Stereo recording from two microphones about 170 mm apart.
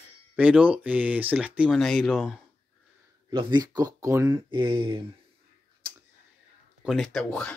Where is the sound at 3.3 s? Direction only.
25° right (ahead or behind).